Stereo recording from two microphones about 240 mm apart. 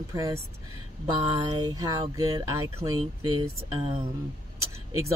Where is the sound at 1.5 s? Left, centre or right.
Centre.